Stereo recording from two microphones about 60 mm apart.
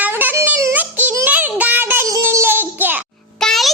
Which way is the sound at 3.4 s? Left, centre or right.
Centre.